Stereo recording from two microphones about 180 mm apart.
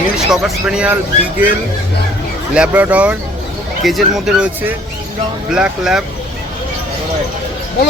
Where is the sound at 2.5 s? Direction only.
5° right (ahead or behind).